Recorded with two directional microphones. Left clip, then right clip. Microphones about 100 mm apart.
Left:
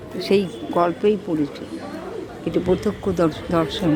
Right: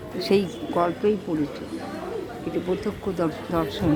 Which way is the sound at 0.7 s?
40° left (ahead or behind).